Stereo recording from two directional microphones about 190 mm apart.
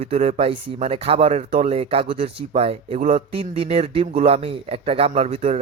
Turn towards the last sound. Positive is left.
turn(degrees=-30)  # may be behind; listen again after turning